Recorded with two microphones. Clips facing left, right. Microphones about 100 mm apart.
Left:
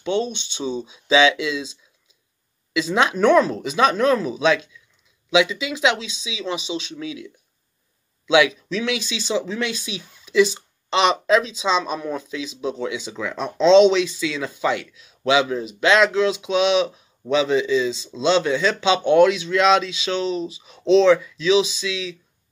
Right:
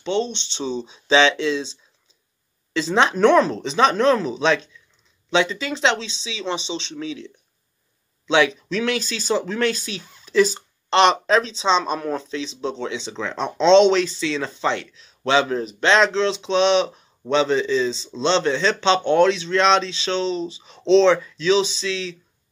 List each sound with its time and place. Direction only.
0.1 s speech: 10° left (ahead or behind)
0.8 s speech: 30° right (ahead or behind)
9.8 s speech: 10° left (ahead or behind)
10.2 s speech: 35° right (ahead or behind)
17.9 s speech: 5° left (ahead or behind)
18.2 s speech: 30° right (ahead or behind)